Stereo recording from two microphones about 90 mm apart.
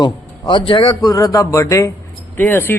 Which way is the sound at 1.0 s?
40° left (ahead or behind).